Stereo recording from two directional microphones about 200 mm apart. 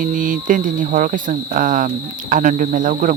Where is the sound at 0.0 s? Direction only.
40° right (ahead or behind).